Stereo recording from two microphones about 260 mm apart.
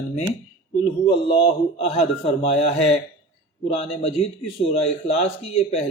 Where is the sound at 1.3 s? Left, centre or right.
Left.